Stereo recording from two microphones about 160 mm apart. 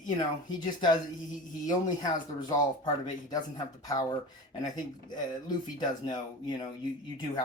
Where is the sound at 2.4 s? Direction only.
25° left (ahead or behind).